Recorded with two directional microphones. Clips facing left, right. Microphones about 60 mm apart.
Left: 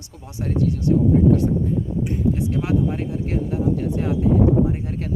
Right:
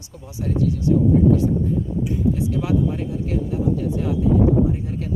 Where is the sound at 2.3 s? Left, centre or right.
Left.